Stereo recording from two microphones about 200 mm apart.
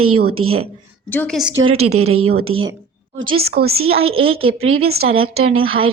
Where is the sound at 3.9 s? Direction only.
30° right (ahead or behind).